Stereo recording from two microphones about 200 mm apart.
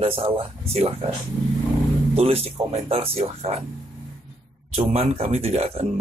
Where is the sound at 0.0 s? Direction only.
30° right (ahead or behind).